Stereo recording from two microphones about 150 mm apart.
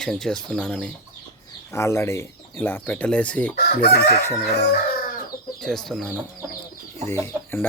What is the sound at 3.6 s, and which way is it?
Chicken, 90° left.